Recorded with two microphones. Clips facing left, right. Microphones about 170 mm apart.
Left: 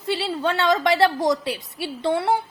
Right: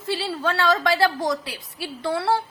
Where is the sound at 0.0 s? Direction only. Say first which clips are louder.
Left 2 dB; 20° left (ahead or behind).